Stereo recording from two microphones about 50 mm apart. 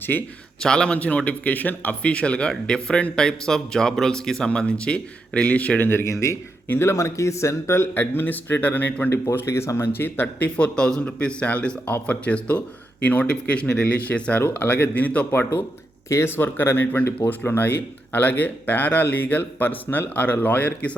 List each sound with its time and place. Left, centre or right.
0.1 s speech: left
0.6 s speech: centre
0.9 s speech: left
2.0 s speech: left
5.8 s speech: left
6.1 s speech: left
6.7 s speech: left
7.9 s speech: left
9.5 s speech: left
9.9 s speech: left
10.6 s speech: centre
15.3 s speech: left